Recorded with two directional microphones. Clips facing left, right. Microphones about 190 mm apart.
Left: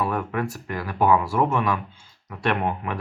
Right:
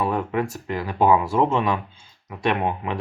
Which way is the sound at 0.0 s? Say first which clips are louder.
Right 2 dB; 20° right (ahead or behind).